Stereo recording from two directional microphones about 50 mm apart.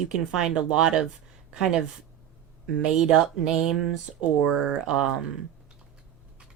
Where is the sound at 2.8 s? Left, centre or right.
Centre.